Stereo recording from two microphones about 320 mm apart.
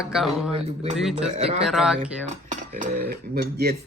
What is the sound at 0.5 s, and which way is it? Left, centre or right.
Speech, centre.